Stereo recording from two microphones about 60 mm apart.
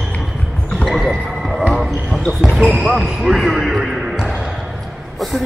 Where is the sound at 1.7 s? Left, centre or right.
Centre.